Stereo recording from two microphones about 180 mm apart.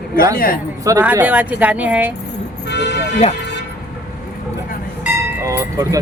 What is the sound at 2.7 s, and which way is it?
Vehicle, 70° left (ahead or behind).